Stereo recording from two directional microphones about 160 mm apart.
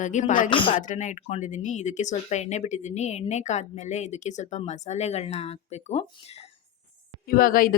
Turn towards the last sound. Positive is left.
turn(degrees=60)  # may be behind; listen again after turning